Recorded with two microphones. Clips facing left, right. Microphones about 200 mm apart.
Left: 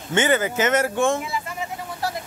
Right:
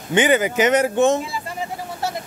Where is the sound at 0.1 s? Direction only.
15° right (ahead or behind).